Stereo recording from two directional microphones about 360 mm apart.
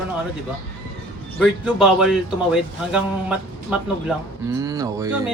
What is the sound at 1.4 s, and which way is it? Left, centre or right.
Speech, centre.